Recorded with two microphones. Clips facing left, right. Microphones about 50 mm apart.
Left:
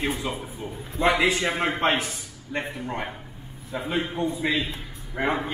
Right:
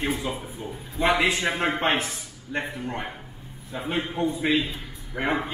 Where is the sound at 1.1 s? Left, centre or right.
Right.